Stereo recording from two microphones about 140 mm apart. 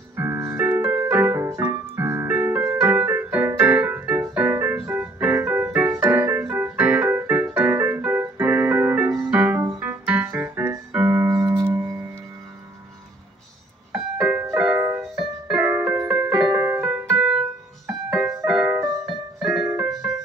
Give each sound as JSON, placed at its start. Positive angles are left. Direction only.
{"t": 0.1, "sound": "music", "side_deg": -20}
{"t": 9.8, "sound": "keyboard", "side_deg": -15}
{"t": 13.9, "sound": "music", "side_deg": -5}
{"t": 15.1, "sound": "music", "side_deg": -5}
{"t": 16.0, "sound": "music", "side_deg": -20}
{"t": 16.5, "sound": "piano", "side_deg": -15}
{"t": 20.0, "sound": "music", "side_deg": -10}